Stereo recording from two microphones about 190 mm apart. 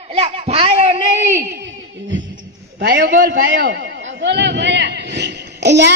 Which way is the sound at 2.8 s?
65° right (ahead or behind).